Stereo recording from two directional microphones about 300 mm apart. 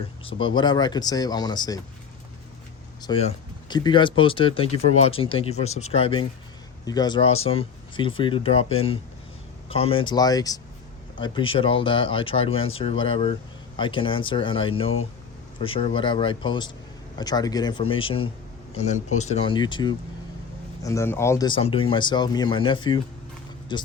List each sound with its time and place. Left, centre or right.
0.3 s speech: centre
3.0 s speech: centre